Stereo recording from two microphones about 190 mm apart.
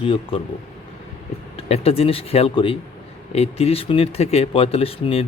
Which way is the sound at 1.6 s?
35° left (ahead or behind).